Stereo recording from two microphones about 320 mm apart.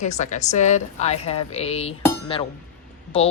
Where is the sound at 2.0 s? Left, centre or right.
Centre.